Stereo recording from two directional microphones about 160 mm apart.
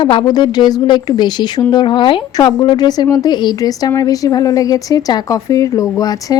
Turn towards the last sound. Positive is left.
turn(degrees=25)  # may be behind; listen again after turning